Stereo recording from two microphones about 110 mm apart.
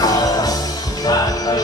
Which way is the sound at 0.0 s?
35° left (ahead or behind).